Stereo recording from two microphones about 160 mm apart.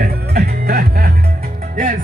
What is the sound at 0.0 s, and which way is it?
Music, 70° right (ahead or behind).